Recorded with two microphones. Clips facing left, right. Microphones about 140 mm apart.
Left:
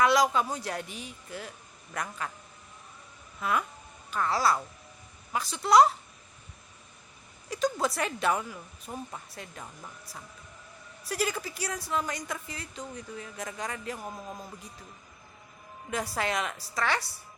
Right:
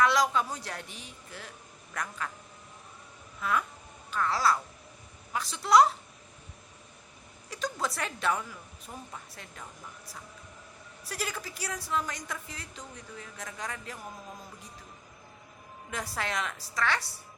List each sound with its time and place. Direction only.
0.0 s a man's voice: 10° left (ahead or behind)
4.1 s a man's voice: 10° left (ahead or behind)
7.5 s a man's voice: 5° left (ahead or behind)
8.9 s speech: 20° left (ahead or behind)
11.1 s a woman's voice: 5° left (ahead or behind)
15.9 s a man's voice: 5° left (ahead or behind)